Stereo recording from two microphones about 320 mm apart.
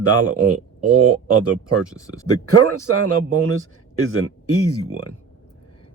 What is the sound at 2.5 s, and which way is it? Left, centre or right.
Speech, right.